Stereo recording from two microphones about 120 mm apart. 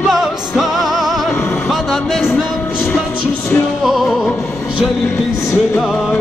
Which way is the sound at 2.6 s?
15° left (ahead or behind).